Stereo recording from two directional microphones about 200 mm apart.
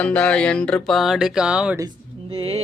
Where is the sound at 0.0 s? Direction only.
5° left (ahead or behind).